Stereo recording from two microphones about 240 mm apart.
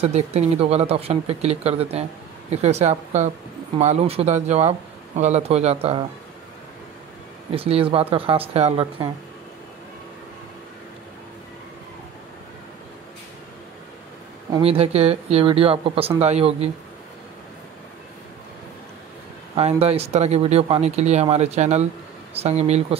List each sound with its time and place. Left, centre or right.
0.0 s speech: right
7.5 s speech: right
14.5 s speech: right
19.5 s speech: right